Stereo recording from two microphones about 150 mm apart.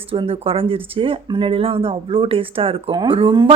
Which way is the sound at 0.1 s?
35° right (ahead or behind).